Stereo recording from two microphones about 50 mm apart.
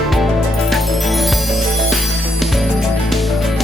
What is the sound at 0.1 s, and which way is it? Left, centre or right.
Music, centre.